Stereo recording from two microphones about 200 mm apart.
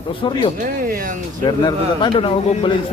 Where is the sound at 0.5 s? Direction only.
45° right (ahead or behind).